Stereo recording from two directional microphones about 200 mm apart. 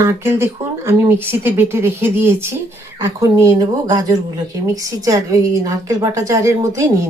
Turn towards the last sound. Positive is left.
turn(degrees=-15)  # may be behind; listen again after turning